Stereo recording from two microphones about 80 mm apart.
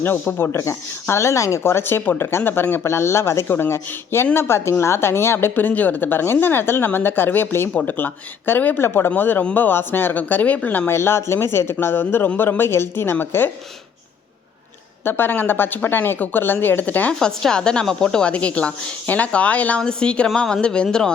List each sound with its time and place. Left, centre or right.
0.0 s speech: left
10.9 s speech: left
15.0 s speech: left
17.2 s a woman's voice: centre